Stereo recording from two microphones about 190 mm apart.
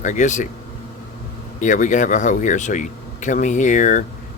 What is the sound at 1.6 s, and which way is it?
Speech, 40° left (ahead or behind).